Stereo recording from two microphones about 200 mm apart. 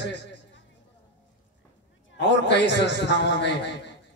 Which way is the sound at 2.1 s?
60° left (ahead or behind).